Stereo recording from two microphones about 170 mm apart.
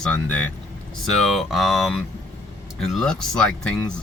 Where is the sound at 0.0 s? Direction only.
5° left (ahead or behind).